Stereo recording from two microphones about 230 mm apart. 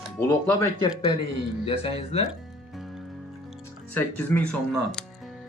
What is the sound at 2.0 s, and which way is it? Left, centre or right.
Speech, left.